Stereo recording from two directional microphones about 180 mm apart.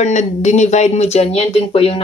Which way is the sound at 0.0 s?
40° left (ahead or behind).